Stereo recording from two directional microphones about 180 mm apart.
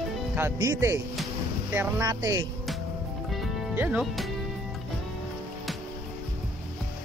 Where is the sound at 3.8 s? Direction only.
5° right (ahead or behind).